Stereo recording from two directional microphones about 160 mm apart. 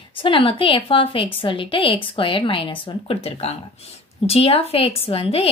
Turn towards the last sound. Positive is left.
turn(degrees=35)  # may be behind; listen again after turning